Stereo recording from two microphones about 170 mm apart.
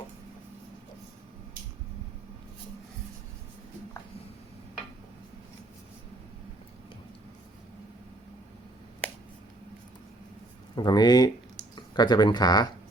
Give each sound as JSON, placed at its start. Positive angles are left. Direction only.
{"t": 10.8, "sound": "speech", "side_deg": 25}